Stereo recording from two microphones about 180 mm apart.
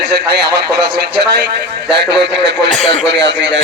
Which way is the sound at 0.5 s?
65° right (ahead or behind).